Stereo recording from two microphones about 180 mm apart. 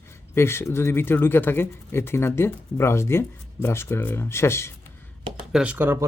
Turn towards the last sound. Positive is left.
turn(degrees=-10)  # may be behind; listen again after turning